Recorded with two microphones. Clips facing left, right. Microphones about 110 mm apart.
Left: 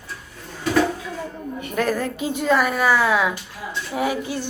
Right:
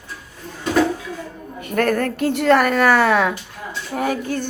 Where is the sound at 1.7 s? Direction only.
55° right (ahead or behind).